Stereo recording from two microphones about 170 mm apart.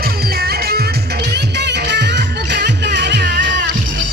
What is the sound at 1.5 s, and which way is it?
Music, 85° right.